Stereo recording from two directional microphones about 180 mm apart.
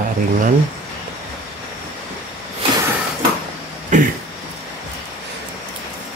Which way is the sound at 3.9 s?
40° right (ahead or behind).